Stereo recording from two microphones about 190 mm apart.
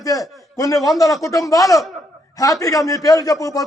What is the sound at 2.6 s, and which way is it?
Speech, 15° left (ahead or behind).